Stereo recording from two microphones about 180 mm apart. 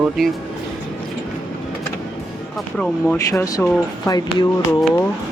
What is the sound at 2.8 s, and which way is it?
Speech, 15° left (ahead or behind).